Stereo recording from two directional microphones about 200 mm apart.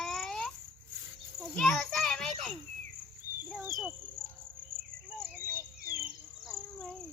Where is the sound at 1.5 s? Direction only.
Centre (ahead or behind).